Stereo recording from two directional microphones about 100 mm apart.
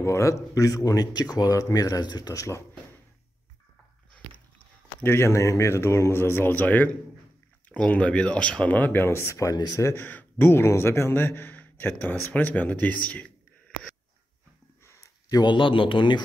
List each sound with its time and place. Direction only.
0.0 s speech: 30° left (ahead or behind)
5.0 s a man's voice: 25° left (ahead or behind)
10.0 s a man's voice: 20° left (ahead or behind)
15.2 s speech: 45° left (ahead or behind)